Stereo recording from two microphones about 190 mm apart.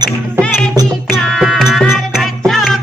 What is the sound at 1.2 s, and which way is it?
Music, centre (ahead or behind).